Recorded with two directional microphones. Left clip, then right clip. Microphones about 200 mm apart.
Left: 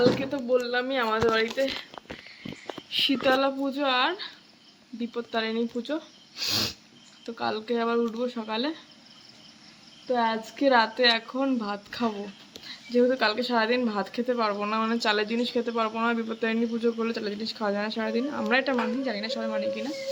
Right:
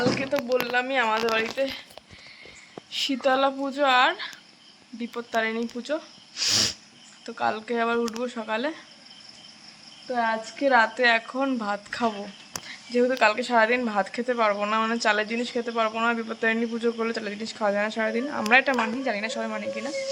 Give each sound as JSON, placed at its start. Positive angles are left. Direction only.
{"t": 0.2, "sound": "speech", "side_deg": 10}
{"t": 2.9, "sound": "speech", "side_deg": 0}
{"t": 6.4, "sound": "sneeze", "side_deg": 0}
{"t": 7.3, "sound": "speech", "side_deg": 5}
{"t": 10.1, "sound": "speech", "side_deg": 15}